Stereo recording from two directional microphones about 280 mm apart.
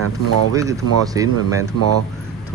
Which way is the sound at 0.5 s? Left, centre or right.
Centre.